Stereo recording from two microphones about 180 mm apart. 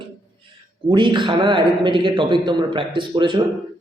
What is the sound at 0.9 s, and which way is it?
A man's voice, 25° right (ahead or behind).